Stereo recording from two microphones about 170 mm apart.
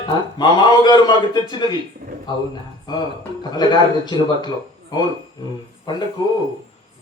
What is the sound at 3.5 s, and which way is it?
Speech, 25° left (ahead or behind).